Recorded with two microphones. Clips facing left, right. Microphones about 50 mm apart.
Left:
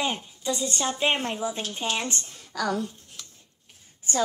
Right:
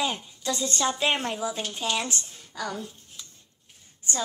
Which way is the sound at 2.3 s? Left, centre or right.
Left.